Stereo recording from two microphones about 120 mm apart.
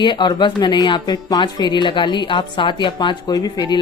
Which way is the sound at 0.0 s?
40° left (ahead or behind).